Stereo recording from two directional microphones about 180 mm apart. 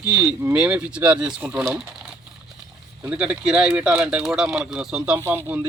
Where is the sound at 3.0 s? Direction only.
5° right (ahead or behind).